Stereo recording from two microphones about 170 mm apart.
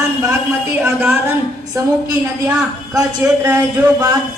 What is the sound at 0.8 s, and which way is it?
Speech, 15° right (ahead or behind).